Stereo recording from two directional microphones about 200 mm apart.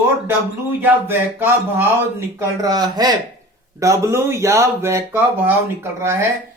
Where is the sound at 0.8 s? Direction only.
10° right (ahead or behind).